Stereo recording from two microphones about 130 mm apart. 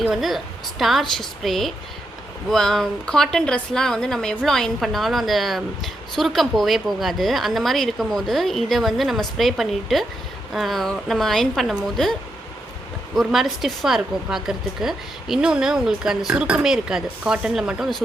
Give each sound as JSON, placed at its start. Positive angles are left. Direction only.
{"t": 0.0, "sound": "a woman's voice", "side_deg": 0}
{"t": 13.1, "sound": "a woman's voice", "side_deg": 0}